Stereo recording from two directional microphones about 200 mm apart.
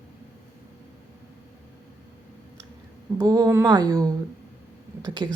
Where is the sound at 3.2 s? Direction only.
20° right (ahead or behind).